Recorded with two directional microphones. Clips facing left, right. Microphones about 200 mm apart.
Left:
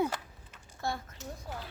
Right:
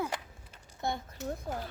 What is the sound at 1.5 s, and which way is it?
Speech, 50° right (ahead or behind).